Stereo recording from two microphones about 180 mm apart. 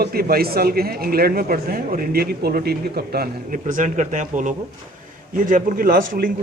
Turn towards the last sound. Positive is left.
turn(degrees=-50)  # may be behind; listen again after turning